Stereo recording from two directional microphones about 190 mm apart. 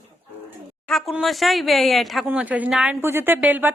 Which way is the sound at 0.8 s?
Centre (ahead or behind).